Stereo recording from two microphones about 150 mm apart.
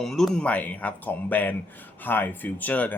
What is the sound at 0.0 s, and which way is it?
Speech, centre (ahead or behind).